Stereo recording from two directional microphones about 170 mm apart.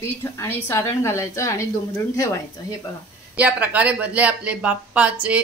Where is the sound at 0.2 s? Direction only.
15° left (ahead or behind).